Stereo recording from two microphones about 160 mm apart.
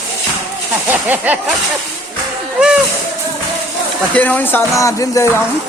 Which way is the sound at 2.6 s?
5° right (ahead or behind).